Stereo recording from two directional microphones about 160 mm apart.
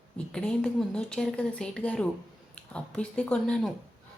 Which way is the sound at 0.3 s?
5° left (ahead or behind).